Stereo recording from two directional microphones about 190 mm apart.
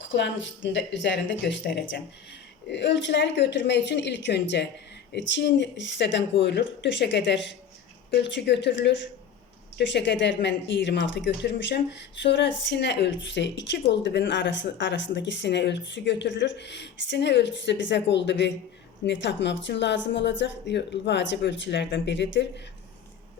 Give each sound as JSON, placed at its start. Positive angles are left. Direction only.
{"t": 0.1, "sound": "a woman's voice", "side_deg": 75}